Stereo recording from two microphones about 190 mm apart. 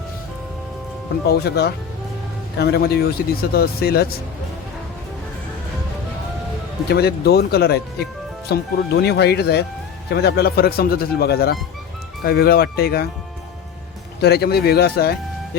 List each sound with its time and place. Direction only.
1.3 s speech: 55° left (ahead or behind)
6.8 s speech: 55° left (ahead or behind)
14.2 s speech: 55° left (ahead or behind)